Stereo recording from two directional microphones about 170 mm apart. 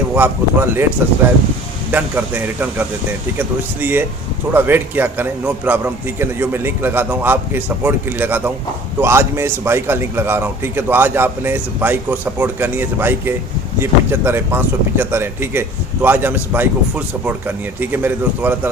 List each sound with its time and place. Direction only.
0.1 s speech: 15° right (ahead or behind)
1.9 s speech: 10° right (ahead or behind)